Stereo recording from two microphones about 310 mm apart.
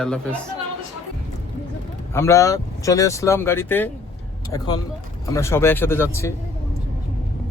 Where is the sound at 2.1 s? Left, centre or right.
Centre.